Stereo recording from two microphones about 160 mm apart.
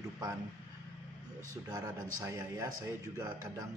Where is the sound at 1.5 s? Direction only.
25° right (ahead or behind).